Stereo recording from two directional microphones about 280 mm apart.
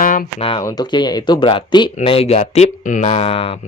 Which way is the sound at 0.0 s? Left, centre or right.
Left.